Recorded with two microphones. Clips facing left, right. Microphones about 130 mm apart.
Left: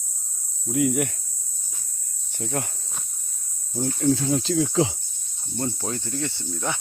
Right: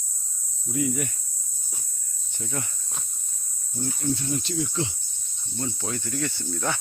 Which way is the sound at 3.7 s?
90° left.